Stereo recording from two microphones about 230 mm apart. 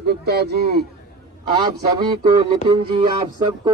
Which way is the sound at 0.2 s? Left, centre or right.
Right.